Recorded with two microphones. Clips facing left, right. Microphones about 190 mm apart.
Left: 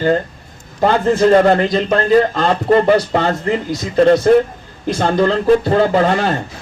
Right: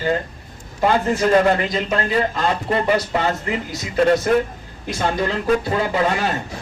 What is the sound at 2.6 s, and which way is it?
Speech, 40° left (ahead or behind).